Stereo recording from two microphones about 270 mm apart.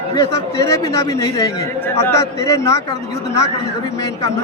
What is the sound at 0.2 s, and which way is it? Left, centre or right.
A man's voice, centre.